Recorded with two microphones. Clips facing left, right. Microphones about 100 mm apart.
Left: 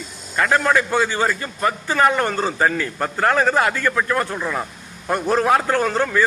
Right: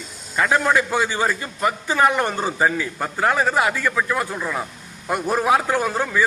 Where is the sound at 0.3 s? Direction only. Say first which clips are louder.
Left 1 dB; 10° right (ahead or behind).